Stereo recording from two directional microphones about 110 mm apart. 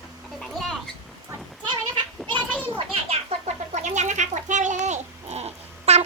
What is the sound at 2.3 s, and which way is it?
Children playing, 15° left (ahead or behind).